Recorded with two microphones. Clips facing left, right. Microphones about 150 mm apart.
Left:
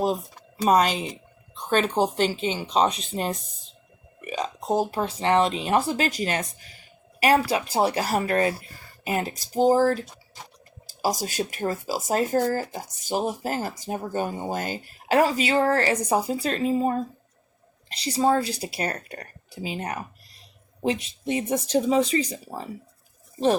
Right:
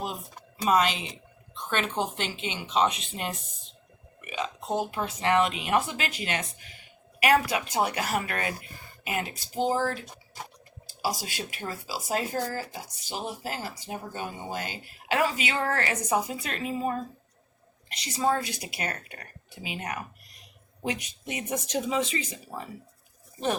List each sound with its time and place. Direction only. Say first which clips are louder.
0.0 s speech: left 10 dB; 40° left (ahead or behind)
11.0 s a woman's voice: left 6 dB; 40° left (ahead or behind)